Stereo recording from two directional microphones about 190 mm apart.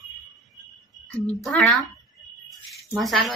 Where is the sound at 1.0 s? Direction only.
5° left (ahead or behind).